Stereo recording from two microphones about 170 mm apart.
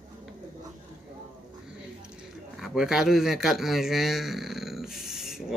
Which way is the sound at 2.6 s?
5° right (ahead or behind).